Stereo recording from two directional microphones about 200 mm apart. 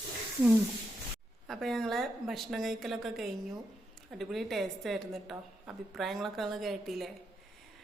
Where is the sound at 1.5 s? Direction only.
Centre (ahead or behind).